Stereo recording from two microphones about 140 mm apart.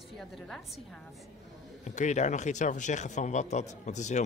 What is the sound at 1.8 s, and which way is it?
Speech, 55° left (ahead or behind).